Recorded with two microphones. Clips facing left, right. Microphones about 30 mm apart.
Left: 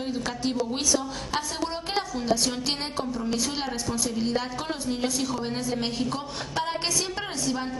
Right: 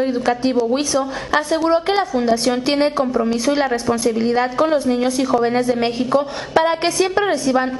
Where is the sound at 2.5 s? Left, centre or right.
Right.